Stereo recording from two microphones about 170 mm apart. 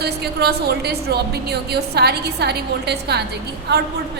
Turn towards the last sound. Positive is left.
turn(degrees=-75)  # may be behind; listen again after turning